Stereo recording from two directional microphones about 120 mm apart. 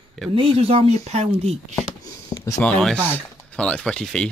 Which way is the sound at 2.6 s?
5° left (ahead or behind).